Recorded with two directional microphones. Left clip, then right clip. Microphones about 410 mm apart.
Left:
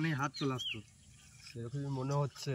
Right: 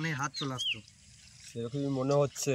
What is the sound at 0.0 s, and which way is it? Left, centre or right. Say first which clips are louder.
Speech: right 2 dB; centre.